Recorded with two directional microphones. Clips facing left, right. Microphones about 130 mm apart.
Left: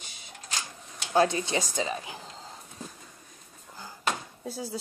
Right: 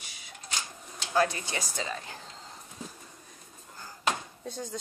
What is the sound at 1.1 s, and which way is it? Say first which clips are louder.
A woman's voice: left 4 dB; 25° left (ahead or behind).